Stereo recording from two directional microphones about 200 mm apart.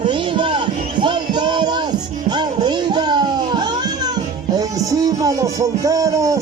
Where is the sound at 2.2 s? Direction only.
20° right (ahead or behind).